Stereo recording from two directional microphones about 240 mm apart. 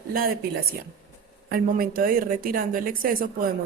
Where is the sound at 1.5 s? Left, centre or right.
Right.